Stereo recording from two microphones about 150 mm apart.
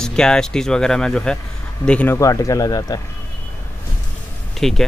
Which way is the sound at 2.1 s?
20° left (ahead or behind).